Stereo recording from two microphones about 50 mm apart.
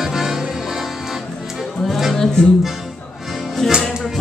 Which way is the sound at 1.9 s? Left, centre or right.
Centre.